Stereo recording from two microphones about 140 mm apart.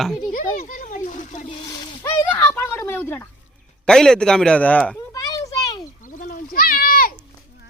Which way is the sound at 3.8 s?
5° left (ahead or behind).